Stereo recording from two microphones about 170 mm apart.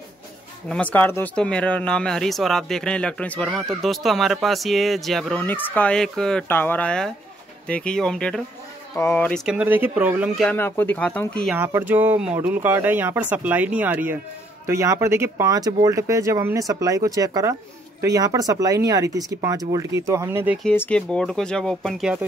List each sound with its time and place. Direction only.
0.7 s speech: 10° left (ahead or behind)
8.9 s speech: 15° left (ahead or behind)
9.5 s speech: 10° right (ahead or behind)
10.5 s speech: 10° left (ahead or behind)
11.5 s speech: 15° right (ahead or behind)
20.6 s speech: 10° left (ahead or behind)